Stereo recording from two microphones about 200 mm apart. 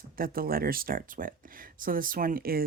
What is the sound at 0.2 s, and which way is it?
Speech, 45° right (ahead or behind).